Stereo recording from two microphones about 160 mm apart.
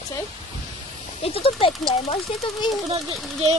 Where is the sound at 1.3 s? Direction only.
35° left (ahead or behind).